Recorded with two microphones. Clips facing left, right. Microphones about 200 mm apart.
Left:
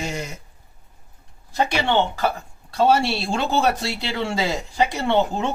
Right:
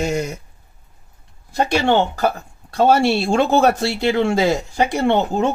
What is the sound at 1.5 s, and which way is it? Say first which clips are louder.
Speech: right 4 dB; 45° right (ahead or behind).